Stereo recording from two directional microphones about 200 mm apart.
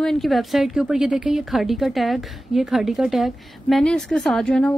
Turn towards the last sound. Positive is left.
turn(degrees=5)  # may be behind; listen again after turning